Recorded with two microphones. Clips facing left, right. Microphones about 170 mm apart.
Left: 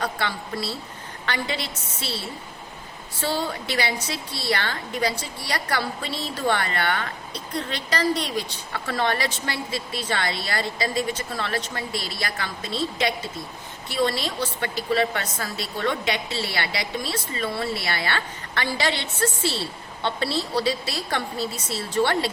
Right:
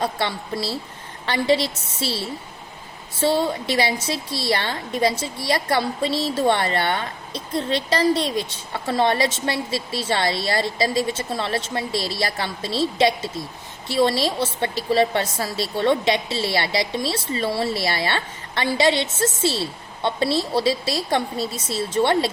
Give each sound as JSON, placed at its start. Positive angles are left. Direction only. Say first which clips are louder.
{"t": 0.0, "sound": "a woman's voice", "louder": "right 3 dB", "side_deg": -25}
{"t": 3.2, "sound": "a woman's voice", "louder": "right 6 dB", "side_deg": -25}